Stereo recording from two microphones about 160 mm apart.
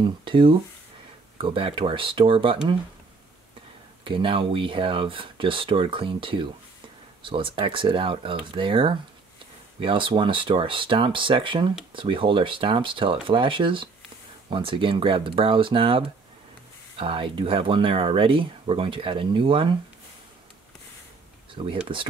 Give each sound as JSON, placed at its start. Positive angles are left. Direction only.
{"t": 0.0, "sound": "speech", "side_deg": -30}
{"t": 4.0, "sound": "speech", "side_deg": -30}
{"t": 21.6, "sound": "speech", "side_deg": -35}